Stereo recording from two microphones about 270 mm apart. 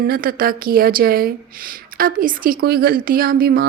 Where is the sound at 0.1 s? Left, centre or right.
Right.